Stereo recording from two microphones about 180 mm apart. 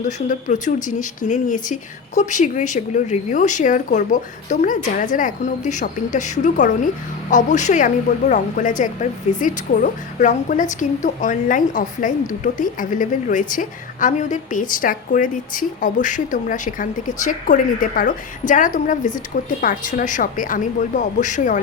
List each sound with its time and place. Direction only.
0.0 s a woman's voice: 45° left (ahead or behind)